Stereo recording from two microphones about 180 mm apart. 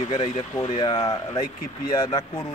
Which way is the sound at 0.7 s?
25° left (ahead or behind).